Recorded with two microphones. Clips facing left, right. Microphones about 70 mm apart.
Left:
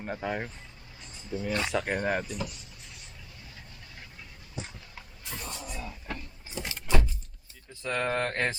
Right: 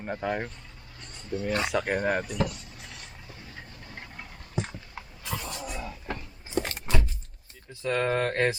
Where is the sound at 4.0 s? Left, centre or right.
Right.